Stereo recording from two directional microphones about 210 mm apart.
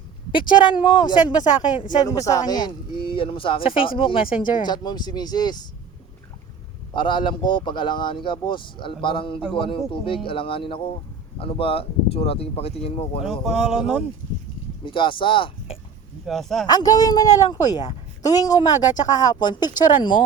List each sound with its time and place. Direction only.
0.3 s a man's voice: 25° left (ahead or behind)
6.9 s a man's voice: 20° left (ahead or behind)
13.2 s speech: centre (ahead or behind)
14.8 s a man's voice: 25° left (ahead or behind)
16.2 s speech: centre (ahead or behind)
16.6 s a man's voice: 20° left (ahead or behind)